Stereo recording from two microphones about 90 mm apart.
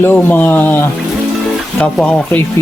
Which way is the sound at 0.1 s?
20° left (ahead or behind).